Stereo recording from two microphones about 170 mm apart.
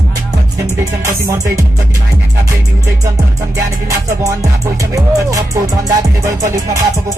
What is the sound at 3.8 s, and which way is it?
Music, 20° right (ahead or behind).